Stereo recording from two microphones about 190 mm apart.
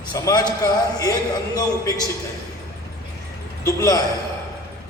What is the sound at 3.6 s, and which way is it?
Speech, 15° left (ahead or behind).